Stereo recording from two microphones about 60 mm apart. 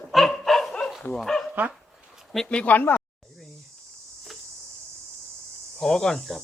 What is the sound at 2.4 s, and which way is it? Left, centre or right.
Speech, left.